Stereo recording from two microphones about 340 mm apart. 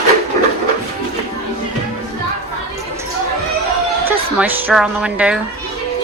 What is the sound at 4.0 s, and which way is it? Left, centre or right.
Speech, centre.